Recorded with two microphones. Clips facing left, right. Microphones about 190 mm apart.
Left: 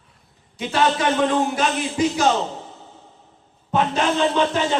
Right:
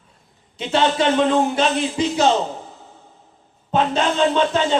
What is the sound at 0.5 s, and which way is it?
A man's voice, 25° right (ahead or behind).